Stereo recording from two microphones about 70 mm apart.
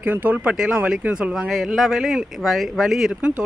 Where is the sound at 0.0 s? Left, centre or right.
Right.